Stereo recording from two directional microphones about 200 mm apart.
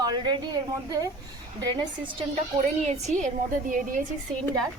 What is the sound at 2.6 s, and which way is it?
A woman's voice, 35° right (ahead or behind).